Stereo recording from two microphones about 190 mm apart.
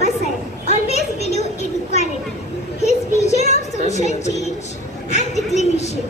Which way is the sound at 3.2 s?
35° left (ahead or behind).